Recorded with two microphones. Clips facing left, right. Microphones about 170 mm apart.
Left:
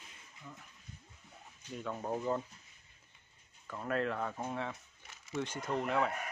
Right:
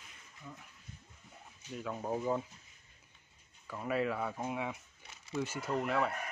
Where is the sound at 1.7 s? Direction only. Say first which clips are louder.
Right 1 dB; centre (ahead or behind).